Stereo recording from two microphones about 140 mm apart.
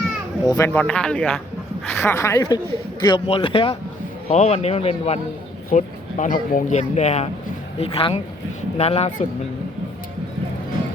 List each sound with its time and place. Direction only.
0.4 s a woman's voice: 25° left (ahead or behind)
0.7 s a woman's voice: 10° left (ahead or behind)
3.2 s speech: 40° left (ahead or behind)
4.3 s a man's voice: 55° left (ahead or behind)
5.7 s speech: 65° left (ahead or behind)
7.8 s a man's voice: 40° left (ahead or behind)